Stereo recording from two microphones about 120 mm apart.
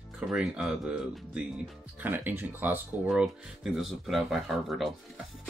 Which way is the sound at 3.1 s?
5° right (ahead or behind).